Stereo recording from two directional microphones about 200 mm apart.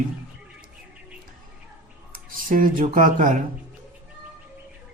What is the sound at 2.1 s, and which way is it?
Speech, 40° right (ahead or behind).